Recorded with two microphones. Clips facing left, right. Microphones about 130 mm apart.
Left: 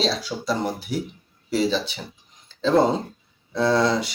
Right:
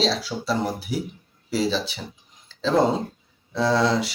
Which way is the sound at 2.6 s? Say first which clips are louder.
Left 1 dB; centre (ahead or behind).